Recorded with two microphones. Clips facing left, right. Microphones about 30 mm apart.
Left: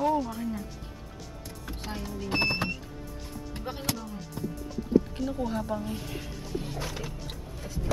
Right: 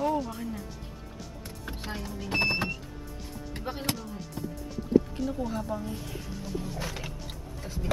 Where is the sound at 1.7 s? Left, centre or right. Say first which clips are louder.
Right 1 dB; right.